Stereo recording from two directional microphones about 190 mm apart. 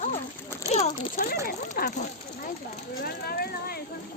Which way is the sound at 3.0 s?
55° left (ahead or behind).